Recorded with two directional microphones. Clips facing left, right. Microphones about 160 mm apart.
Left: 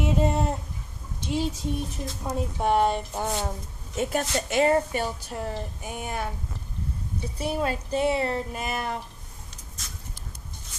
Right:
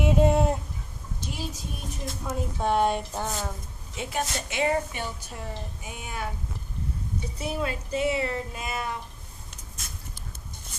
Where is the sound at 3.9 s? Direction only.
45° left (ahead or behind).